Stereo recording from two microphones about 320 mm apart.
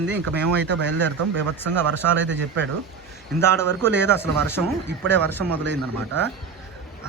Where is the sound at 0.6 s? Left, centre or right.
Right.